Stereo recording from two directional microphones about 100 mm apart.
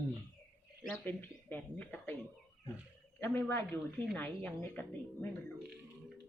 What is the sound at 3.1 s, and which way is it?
A man's voice, 25° left (ahead or behind).